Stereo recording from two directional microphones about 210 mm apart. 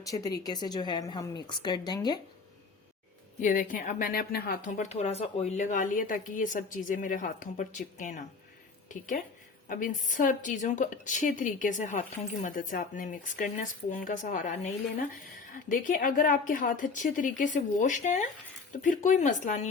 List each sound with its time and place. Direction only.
0.0 s a woman's voice: 15° left (ahead or behind)
3.4 s a woman's voice: 40° left (ahead or behind)
15.7 s a woman's voice: 40° left (ahead or behind)